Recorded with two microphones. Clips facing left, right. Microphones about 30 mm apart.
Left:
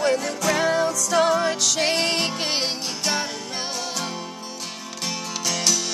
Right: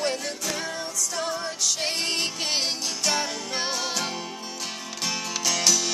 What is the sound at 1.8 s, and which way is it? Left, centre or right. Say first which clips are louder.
Music: left 7 dB; left.